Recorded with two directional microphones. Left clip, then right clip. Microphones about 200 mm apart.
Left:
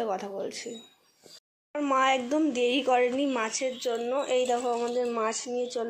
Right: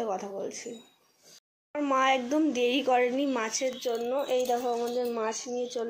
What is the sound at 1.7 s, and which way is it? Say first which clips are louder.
Speech: left 1 dB; centre (ahead or behind).